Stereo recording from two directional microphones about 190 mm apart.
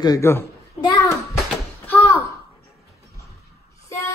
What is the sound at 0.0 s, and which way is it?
Speech, 15° left (ahead or behind).